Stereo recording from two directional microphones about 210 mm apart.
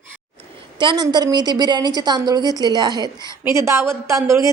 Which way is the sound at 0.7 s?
20° right (ahead or behind).